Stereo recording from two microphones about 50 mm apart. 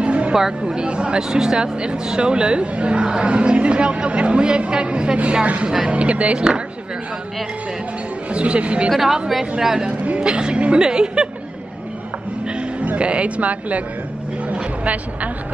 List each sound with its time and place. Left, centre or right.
0.0 s a sound: right
0.3 s speech: centre
8.3 s speech: right
8.9 s a woman's voice: centre
9.8 s speech: right
12.5 s speech: right